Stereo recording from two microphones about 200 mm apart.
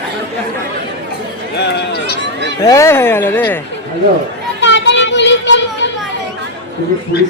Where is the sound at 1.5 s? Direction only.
55° left (ahead or behind).